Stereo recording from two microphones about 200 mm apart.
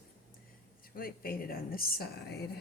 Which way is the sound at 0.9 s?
45° left (ahead or behind).